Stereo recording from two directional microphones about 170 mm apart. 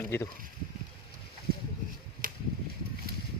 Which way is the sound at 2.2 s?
55° right (ahead or behind).